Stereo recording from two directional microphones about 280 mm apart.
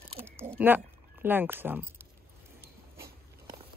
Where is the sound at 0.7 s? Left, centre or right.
Centre.